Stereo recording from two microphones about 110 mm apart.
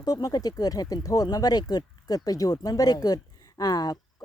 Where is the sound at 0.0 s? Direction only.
35° left (ahead or behind).